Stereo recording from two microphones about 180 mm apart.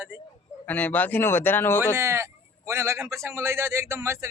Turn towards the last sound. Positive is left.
turn(degrees=-15)  # may be behind; listen again after turning